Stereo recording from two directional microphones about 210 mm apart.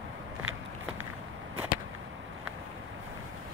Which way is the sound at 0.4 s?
75° right (ahead or behind).